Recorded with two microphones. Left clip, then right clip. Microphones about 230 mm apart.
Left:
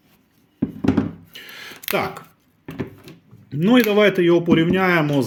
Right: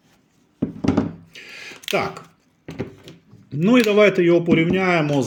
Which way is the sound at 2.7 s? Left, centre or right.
Centre.